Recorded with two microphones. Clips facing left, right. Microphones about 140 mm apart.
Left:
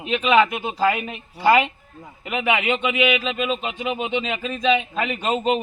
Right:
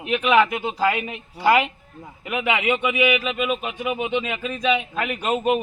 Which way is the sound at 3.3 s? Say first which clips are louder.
Even; 15° right (ahead or behind).